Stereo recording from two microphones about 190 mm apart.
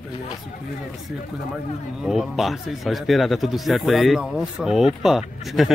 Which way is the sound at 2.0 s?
Centre (ahead or behind).